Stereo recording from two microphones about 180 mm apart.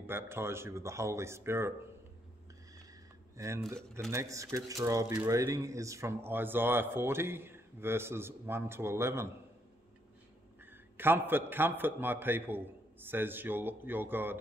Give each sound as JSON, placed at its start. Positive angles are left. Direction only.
{"t": 0.0, "sound": "speech", "side_deg": -15}
{"t": 3.3, "sound": "speech", "side_deg": -15}
{"t": 10.6, "sound": "speech", "side_deg": -10}